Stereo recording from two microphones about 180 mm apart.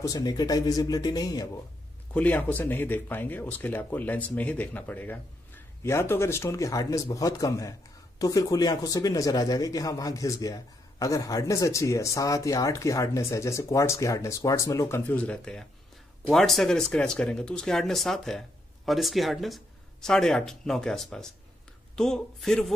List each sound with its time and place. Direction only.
0.0 s speech: 20° left (ahead or behind)
2.1 s a man's voice: 10° left (ahead or behind)